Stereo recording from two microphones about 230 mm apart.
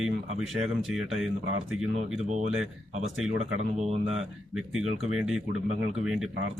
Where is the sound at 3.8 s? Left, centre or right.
Right.